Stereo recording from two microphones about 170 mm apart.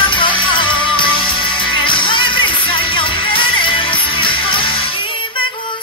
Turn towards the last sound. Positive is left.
turn(degrees=30)  # may be behind; listen again after turning